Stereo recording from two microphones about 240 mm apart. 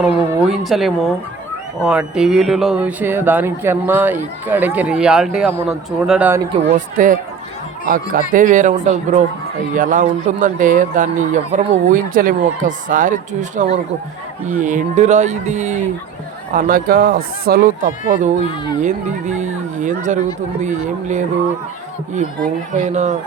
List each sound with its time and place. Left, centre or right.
0.0 s speech: centre
6.5 s a man's voice: right
22.7 s speech: right